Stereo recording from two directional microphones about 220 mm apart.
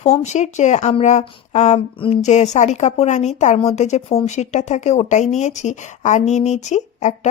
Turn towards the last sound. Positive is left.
turn(degrees=30)  # may be behind; listen again after turning